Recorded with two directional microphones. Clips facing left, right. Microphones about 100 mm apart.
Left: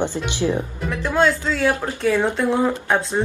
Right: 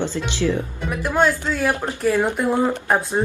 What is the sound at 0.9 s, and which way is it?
Speech, 15° right (ahead or behind).